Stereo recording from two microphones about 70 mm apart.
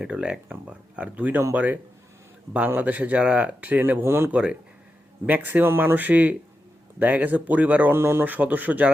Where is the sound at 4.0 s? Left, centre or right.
Right.